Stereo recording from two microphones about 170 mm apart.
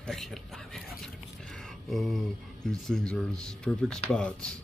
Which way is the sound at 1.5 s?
Centre (ahead or behind).